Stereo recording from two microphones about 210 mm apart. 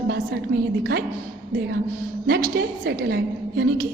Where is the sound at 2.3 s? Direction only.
45° right (ahead or behind).